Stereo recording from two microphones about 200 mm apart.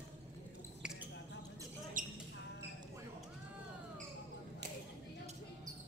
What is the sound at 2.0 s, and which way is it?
Basketball bounce, 40° right (ahead or behind).